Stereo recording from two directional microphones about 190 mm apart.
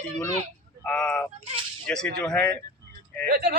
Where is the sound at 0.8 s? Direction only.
5° left (ahead or behind).